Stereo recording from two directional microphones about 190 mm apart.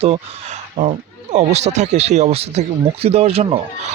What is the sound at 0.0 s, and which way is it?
Speech, 30° right (ahead or behind).